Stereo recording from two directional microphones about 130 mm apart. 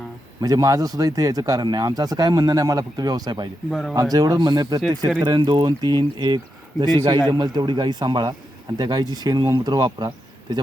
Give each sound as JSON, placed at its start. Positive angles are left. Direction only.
{"t": 0.4, "sound": "speech", "side_deg": -30}
{"t": 3.7, "sound": "speech", "side_deg": 0}
{"t": 4.1, "sound": "speech", "side_deg": -30}